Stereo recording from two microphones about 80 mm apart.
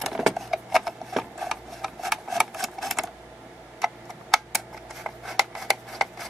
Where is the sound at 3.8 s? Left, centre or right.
Centre.